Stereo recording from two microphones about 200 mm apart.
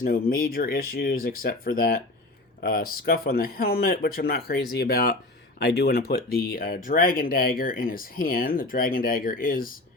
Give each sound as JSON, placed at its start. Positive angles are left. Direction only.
{"t": 0.0, "sound": "speech", "side_deg": 45}